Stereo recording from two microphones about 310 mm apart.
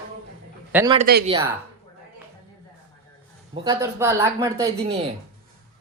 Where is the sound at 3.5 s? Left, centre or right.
Centre.